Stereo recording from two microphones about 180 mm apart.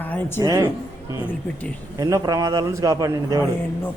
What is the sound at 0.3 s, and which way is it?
Speech, 20° right (ahead or behind).